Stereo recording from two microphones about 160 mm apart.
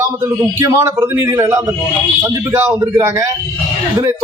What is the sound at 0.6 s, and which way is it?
A man's voice, 20° right (ahead or behind).